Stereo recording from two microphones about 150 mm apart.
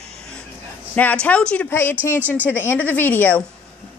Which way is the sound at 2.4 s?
15° left (ahead or behind).